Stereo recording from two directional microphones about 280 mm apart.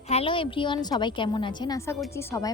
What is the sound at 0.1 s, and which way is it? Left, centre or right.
A woman's voice, centre.